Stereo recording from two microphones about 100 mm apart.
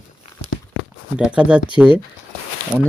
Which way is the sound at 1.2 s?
10° right (ahead or behind).